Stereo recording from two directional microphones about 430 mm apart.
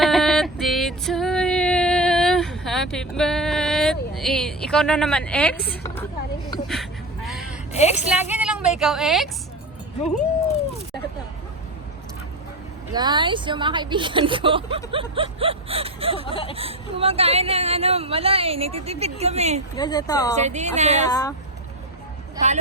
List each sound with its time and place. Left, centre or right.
0.0 s female singing: centre
6.5 s a sound: centre
7.7 s a woman's voice: centre
8.3 s a sound: centre
8.8 s a woman's voice: centre
12.9 s speech: centre
16.2 s speech: centre
16.6 s speech: centre
19.7 s speech: centre
20.3 s speech: centre
21.1 s speech: centre